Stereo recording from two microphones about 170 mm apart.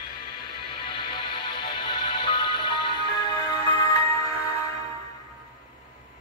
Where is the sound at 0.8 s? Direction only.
30° left (ahead or behind).